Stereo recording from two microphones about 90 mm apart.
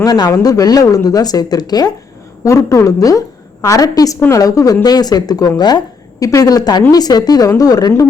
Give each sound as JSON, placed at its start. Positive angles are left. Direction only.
{"t": 0.0, "sound": "speech", "side_deg": 40}
{"t": 2.4, "sound": "a woman's voice", "side_deg": 35}